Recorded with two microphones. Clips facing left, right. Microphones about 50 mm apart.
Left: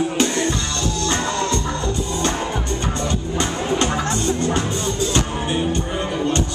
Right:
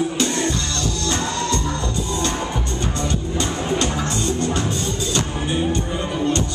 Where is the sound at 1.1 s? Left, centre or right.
Left.